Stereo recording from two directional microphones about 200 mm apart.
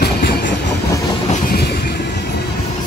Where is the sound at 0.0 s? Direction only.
50° left (ahead or behind).